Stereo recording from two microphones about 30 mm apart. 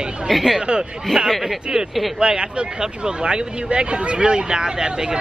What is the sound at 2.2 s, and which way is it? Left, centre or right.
Speech, right.